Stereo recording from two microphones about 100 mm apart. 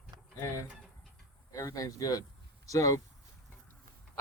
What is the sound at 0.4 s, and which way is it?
Speech, 30° left (ahead or behind).